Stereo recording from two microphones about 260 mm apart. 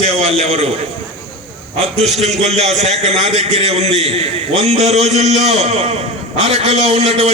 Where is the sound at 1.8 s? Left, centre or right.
Right.